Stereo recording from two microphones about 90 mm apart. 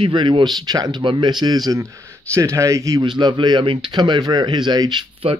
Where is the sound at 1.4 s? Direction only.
45° right (ahead or behind).